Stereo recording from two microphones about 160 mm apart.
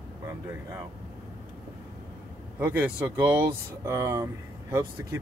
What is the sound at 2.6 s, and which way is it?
Speech, 10° right (ahead or behind).